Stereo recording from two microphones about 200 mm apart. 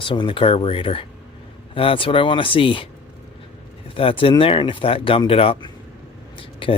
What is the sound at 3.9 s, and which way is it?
Speech, 25° left (ahead or behind).